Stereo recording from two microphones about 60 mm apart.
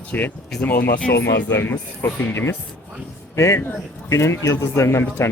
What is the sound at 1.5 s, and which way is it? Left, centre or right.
Speech, left.